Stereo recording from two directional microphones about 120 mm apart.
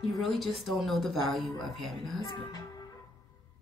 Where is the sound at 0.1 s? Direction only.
Centre (ahead or behind).